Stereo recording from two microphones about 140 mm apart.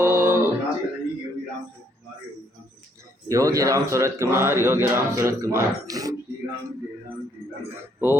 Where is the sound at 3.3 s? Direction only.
25° right (ahead or behind).